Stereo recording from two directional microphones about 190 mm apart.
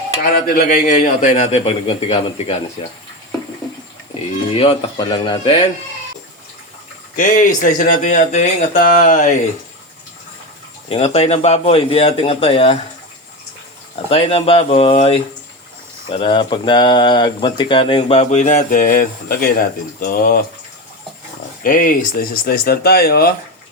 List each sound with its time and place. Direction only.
0.2 s a man's voice: 50° left (ahead or behind); by 2.1 s 30° left (ahead or behind)
4.5 s speech: 30° left (ahead or behind)
7.2 s speech: 45° left (ahead or behind)
10.8 s a man's voice: 35° left (ahead or behind)
14.1 s a man's voice: 30° left (ahead or behind); by 20.4 s 50° left (ahead or behind)
21.6 s speech: 45° left (ahead or behind)